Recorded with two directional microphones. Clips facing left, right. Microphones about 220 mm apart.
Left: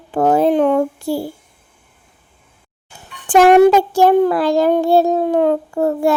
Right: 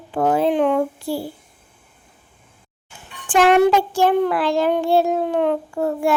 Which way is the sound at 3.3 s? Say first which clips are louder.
Left 5 dB; 40° left (ahead or behind).